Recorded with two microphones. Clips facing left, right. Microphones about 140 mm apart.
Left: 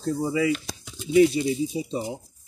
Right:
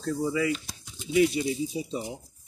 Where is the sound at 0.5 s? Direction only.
90° left.